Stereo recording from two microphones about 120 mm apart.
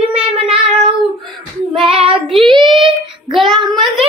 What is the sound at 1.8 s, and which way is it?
Child singing, 50° right (ahead or behind).